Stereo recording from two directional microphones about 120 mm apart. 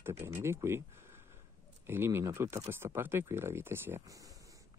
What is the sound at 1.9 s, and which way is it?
Speech, 20° right (ahead or behind).